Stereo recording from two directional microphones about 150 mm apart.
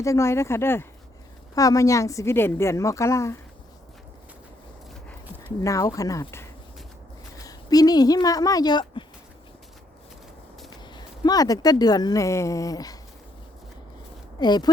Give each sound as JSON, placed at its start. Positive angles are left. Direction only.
{"t": 0.0, "sound": "a woman's voice", "side_deg": 20}
{"t": 5.5, "sound": "a woman's voice", "side_deg": 20}
{"t": 10.8, "sound": "speech", "side_deg": 30}
{"t": 14.3, "sound": "a woman's voice", "side_deg": 30}